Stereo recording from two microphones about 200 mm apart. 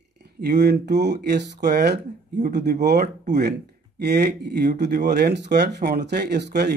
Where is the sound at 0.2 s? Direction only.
55° right (ahead or behind).